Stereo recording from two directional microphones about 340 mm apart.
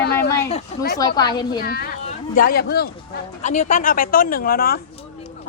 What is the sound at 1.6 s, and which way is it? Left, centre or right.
A woman's voice, left.